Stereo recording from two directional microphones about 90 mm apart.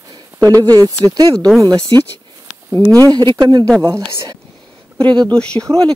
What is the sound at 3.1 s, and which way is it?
Speech, 50° right (ahead or behind).